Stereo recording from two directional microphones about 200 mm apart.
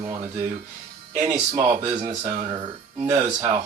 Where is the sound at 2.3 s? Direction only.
35° right (ahead or behind).